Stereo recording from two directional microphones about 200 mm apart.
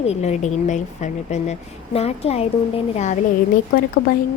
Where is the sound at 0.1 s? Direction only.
35° left (ahead or behind).